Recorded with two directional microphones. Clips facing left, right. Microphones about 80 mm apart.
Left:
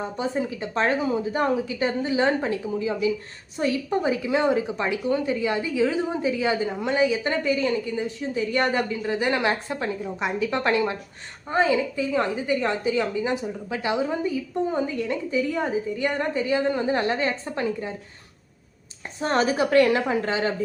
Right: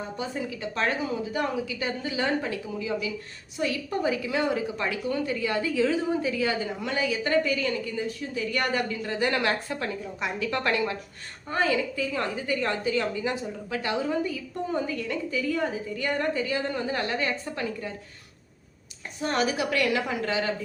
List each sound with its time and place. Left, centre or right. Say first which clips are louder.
0.2 s a woman's voice: left 6 dB; left
19.2 s a woman's voice: left 4 dB; left